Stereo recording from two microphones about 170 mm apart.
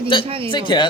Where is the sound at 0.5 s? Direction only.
25° left (ahead or behind).